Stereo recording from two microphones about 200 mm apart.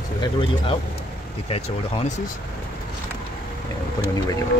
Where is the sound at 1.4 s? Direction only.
30° left (ahead or behind).